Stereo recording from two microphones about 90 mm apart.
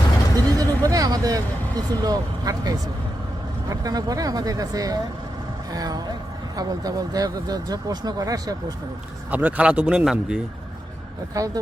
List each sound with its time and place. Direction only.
0.3 s a sound: 40° right (ahead or behind)
0.9 s speech: 45° right (ahead or behind)
9.3 s a man's voice: 15° right (ahead or behind)
11.3 s speech: 40° right (ahead or behind)